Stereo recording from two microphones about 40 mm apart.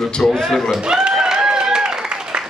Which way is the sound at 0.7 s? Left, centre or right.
Centre.